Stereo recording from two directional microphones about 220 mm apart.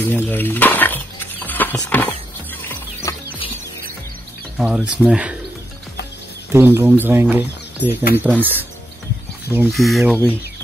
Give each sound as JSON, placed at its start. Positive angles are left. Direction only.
{"t": 0.0, "sound": "a sound", "side_deg": 10}
{"t": 2.7, "sound": "music", "side_deg": 15}
{"t": 4.6, "sound": "speech", "side_deg": -5}
{"t": 6.5, "sound": "speech", "side_deg": -10}
{"t": 7.9, "sound": "speech", "side_deg": 45}
{"t": 8.2, "sound": "speech", "side_deg": -10}
{"t": 9.7, "sound": "speech", "side_deg": 0}